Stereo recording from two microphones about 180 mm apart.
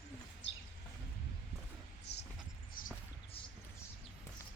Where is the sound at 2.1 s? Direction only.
65° left (ahead or behind).